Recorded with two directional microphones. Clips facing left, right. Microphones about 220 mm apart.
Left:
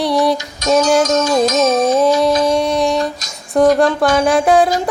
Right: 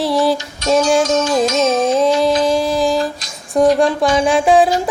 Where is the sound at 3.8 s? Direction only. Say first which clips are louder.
Left 1 dB; centre (ahead or behind).